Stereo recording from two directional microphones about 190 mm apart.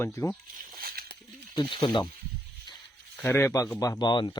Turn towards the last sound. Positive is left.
turn(degrees=25)  # may be behind; listen again after turning